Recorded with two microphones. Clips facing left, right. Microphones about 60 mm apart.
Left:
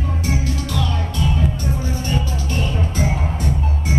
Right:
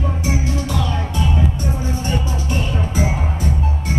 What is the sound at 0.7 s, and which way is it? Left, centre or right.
Music, centre.